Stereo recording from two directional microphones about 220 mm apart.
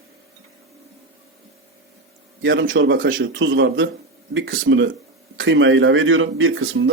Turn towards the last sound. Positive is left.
turn(degrees=-65)  # may be behind; listen again after turning